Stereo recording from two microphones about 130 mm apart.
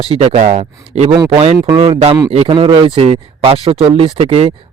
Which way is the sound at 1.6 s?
35° right (ahead or behind).